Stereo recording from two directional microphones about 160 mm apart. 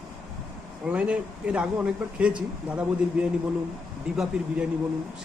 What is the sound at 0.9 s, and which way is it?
Speech, 10° right (ahead or behind).